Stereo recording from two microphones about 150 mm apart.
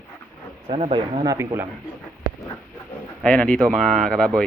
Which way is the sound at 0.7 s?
45° right (ahead or behind).